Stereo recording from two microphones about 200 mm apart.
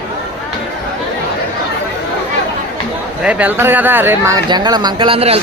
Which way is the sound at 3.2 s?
5° right (ahead or behind).